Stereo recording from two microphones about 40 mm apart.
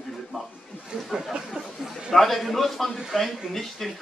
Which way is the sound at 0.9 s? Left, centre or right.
Right.